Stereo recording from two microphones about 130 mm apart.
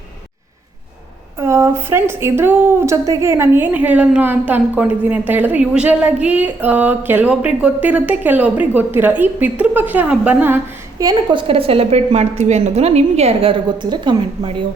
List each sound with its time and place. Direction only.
1.4 s a woman's voice: 20° right (ahead or behind)
11.0 s a woman's voice: 30° right (ahead or behind)